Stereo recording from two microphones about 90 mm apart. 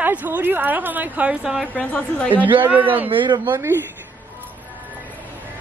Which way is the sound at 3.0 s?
65° right (ahead or behind).